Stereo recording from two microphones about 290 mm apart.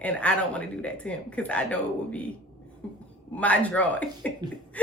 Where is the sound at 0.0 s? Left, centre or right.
Centre.